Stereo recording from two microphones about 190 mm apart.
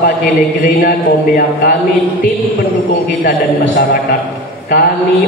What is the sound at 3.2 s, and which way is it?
Speech, 60° left (ahead or behind).